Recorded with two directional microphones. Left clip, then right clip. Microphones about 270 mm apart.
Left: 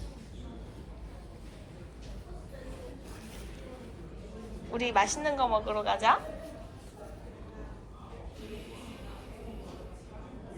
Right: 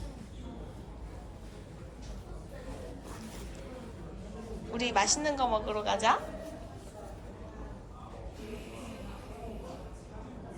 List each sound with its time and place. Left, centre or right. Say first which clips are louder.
4.7 s a woman's voice: left 1 dB; centre